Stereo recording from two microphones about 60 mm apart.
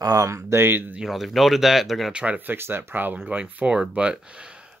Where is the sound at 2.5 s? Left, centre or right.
Right.